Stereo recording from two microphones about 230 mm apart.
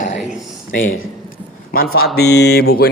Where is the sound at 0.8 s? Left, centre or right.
Left.